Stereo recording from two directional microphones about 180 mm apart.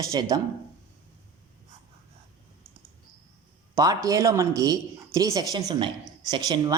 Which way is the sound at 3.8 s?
20° right (ahead or behind).